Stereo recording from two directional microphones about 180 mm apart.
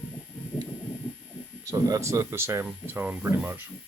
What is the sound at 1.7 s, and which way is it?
Speech, 15° right (ahead or behind).